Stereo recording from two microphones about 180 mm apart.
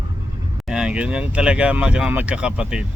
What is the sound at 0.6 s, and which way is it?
Speech, 5° right (ahead or behind).